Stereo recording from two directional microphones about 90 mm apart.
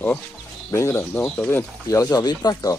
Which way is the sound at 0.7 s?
30° left (ahead or behind).